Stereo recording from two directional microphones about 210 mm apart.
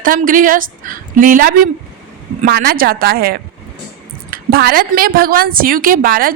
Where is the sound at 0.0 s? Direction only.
40° right (ahead or behind).